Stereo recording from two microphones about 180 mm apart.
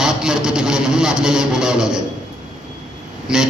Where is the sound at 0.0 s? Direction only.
5° right (ahead or behind).